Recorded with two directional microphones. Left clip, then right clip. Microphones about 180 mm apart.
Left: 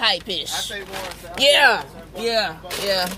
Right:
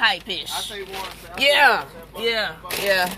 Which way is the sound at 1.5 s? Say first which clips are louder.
Even; 10° left (ahead or behind).